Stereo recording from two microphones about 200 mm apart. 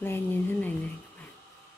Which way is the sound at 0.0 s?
10° left (ahead or behind).